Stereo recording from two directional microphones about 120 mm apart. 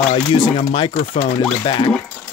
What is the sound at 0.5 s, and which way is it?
Speech, 45° left (ahead or behind).